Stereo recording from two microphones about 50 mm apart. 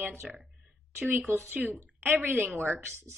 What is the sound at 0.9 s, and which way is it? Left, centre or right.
Speech, right.